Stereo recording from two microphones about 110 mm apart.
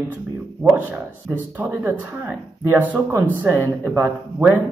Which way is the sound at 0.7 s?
15° right (ahead or behind).